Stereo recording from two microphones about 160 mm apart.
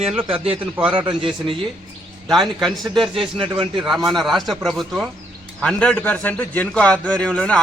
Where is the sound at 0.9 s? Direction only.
35° right (ahead or behind).